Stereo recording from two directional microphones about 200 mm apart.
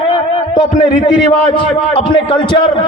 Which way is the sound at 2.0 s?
25° left (ahead or behind).